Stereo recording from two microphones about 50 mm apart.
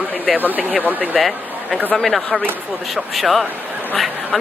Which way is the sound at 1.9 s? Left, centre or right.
Centre.